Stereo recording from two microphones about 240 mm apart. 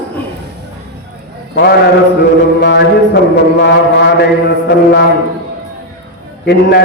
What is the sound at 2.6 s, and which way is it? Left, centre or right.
A man's voice, left.